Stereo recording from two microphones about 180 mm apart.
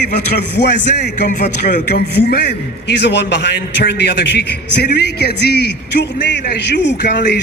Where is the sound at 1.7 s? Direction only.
55° left (ahead or behind).